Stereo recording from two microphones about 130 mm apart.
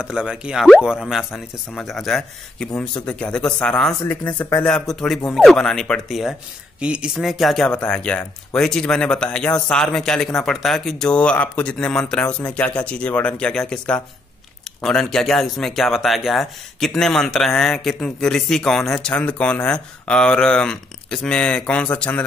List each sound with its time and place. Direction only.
0.0 s a man's voice: 5° right (ahead or behind); by 4.6 s 15° left (ahead or behind)
4.6 s a man's voice: 5° left (ahead or behind)